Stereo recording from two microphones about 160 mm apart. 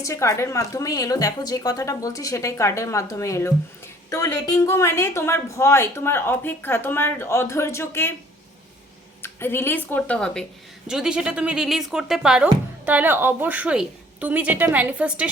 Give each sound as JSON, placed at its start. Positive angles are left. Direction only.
{"t": 0.0, "sound": "a woman's voice", "side_deg": 20}
{"t": 9.2, "sound": "a woman's voice", "side_deg": 15}